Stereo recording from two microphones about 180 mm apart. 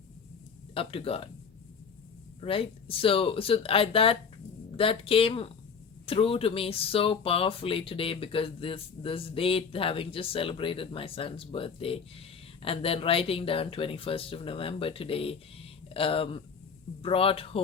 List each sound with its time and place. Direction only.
0.7 s speech: 30° left (ahead or behind)
2.4 s speech: 30° left (ahead or behind)